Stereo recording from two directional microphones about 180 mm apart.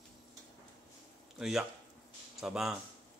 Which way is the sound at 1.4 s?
Centre (ahead or behind).